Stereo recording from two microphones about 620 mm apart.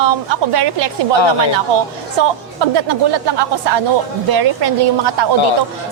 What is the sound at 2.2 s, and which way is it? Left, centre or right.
A woman's voice, right.